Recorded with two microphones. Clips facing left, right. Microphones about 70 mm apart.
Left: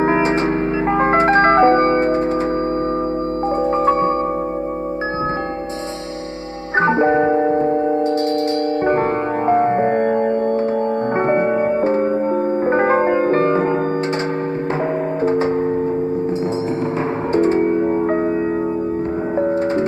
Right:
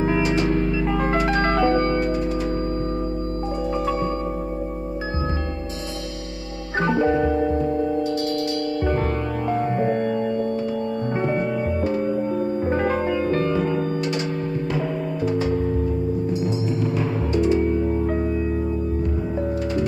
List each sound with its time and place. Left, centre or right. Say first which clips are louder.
0.0 s music: left 5 dB; left
6.8 s music: left 5 dB; left
9.5 s music: left 7 dB; left
15.2 s music: left 6 dB; left
17.3 s music: left 5 dB; left